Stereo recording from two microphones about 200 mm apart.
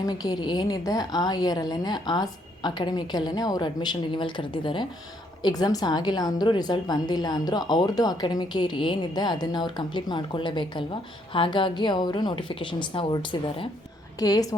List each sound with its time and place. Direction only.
0.0 s a woman's voice: 20° left (ahead or behind)
14.2 s a woman's voice: 20° left (ahead or behind)